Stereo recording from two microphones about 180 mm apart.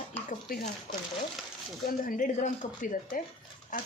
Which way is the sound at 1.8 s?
50° left (ahead or behind).